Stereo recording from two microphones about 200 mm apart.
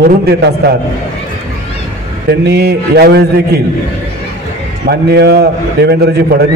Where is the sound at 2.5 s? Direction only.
55° right (ahead or behind).